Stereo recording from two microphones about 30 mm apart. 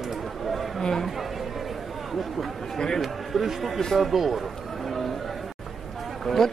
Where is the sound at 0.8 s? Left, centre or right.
Centre.